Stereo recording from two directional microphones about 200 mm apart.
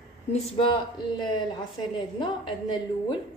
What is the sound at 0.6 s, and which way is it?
A woman's voice, 25° left (ahead or behind).